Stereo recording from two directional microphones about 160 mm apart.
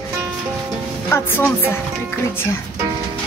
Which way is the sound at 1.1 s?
15° left (ahead or behind).